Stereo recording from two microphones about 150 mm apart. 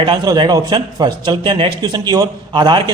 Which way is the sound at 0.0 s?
30° right (ahead or behind).